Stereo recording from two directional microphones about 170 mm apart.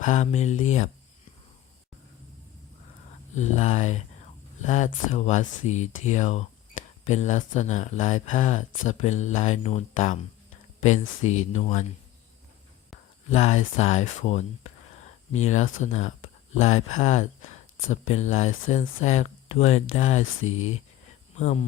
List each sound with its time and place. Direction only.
0.0 s speech: 45° left (ahead or behind)
3.3 s speech: 40° left (ahead or behind)
13.3 s speech: 40° left (ahead or behind)